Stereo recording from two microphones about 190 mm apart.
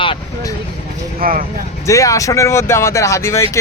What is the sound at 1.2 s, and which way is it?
Speech, 45° right (ahead or behind).